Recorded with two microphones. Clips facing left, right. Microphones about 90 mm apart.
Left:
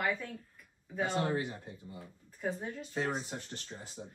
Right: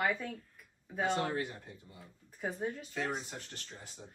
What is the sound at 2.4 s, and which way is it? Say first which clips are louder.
Speech: even; 5° right (ahead or behind).